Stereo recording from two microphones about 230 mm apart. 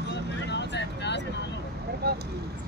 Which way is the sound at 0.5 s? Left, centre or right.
Left.